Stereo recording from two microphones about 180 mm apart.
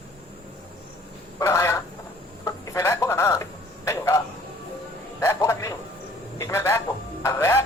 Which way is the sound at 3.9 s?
15° left (ahead or behind).